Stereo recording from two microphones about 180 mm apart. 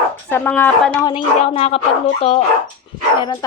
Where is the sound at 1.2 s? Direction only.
35° left (ahead or behind).